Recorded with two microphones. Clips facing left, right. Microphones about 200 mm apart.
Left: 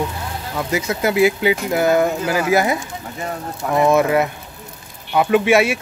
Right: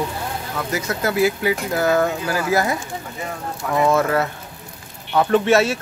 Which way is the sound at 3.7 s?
15° left (ahead or behind).